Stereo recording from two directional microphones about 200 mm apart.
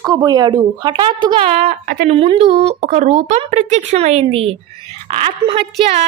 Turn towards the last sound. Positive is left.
turn(degrees=-30)  # may be behind; listen again after turning